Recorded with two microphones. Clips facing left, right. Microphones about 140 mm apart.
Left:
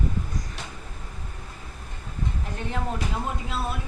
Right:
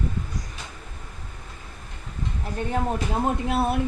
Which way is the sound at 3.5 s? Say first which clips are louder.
Right 8 dB; 60° right (ahead or behind).